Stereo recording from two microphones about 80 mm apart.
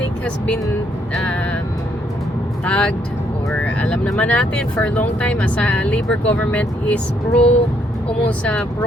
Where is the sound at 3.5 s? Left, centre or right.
Centre.